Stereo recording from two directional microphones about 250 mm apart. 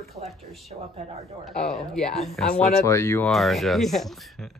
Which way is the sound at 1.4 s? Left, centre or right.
Centre.